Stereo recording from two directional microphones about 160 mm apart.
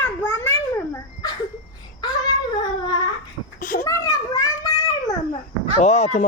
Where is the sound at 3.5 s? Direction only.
60° left (ahead or behind).